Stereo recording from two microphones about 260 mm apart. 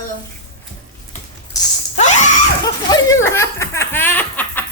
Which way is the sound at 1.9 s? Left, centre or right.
Left.